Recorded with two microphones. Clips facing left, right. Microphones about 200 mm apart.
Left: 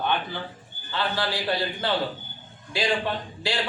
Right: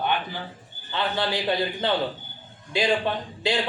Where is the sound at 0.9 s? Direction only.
20° right (ahead or behind).